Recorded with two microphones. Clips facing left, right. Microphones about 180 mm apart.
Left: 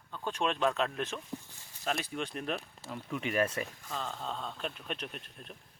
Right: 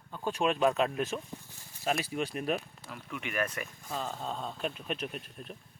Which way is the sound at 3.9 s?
10° right (ahead or behind).